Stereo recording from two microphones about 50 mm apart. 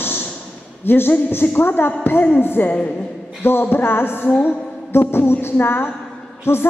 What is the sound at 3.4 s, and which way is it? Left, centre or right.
A woman's voice, left.